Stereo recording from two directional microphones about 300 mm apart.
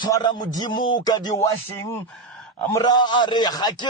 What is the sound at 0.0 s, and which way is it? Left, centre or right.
A man's voice, centre.